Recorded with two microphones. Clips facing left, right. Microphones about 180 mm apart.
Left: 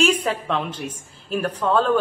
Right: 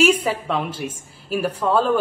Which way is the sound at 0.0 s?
5° right (ahead or behind).